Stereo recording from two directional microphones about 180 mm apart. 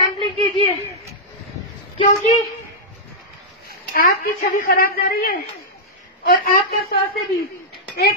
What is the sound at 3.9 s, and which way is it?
A woman's voice, 55° left (ahead or behind).